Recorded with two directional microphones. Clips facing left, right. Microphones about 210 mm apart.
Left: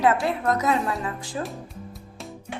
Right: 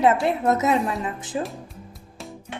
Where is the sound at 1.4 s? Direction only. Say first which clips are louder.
Right 4 dB; centre (ahead or behind).